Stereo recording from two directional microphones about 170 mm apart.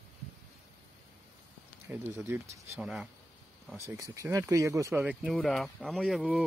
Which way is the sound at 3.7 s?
15° right (ahead or behind).